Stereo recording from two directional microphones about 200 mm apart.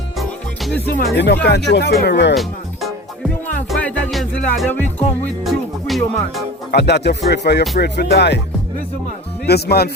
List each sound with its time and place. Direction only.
0.2 s music: centre (ahead or behind)
1.1 s speech: 55° left (ahead or behind)
2.3 s music: centre (ahead or behind)
6.7 s speech: 55° left (ahead or behind)
9.5 s speech: 50° left (ahead or behind)